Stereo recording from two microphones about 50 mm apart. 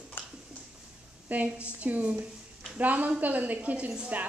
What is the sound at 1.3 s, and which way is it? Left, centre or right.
A woman's voice, right.